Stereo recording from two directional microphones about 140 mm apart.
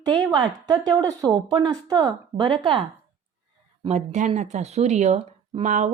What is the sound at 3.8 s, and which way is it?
Speech, 55° right (ahead or behind).